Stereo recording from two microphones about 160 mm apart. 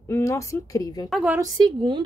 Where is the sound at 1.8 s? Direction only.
30° right (ahead or behind).